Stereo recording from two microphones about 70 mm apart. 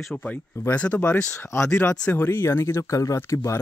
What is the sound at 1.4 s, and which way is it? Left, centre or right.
Speech, left.